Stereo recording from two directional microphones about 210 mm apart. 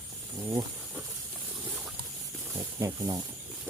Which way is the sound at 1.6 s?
10° right (ahead or behind).